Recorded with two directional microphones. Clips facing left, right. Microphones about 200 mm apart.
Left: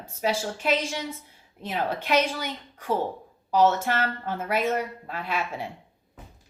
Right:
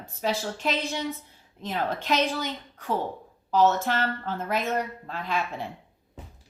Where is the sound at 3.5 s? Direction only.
10° left (ahead or behind).